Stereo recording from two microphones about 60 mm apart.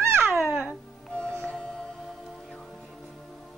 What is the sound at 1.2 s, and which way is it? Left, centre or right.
Music, centre.